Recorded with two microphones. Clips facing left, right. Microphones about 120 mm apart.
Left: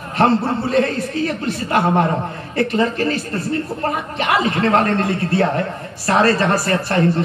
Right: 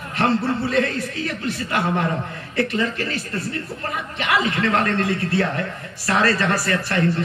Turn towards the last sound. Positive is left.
turn(degrees=35)  # may be behind; listen again after turning